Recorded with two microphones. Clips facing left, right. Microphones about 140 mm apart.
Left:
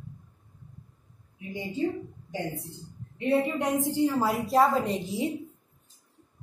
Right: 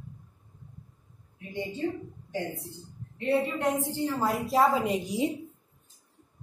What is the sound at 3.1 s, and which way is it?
A woman's voice, 15° left (ahead or behind).